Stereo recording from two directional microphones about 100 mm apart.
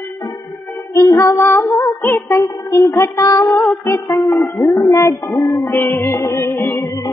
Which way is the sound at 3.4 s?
Centre (ahead or behind).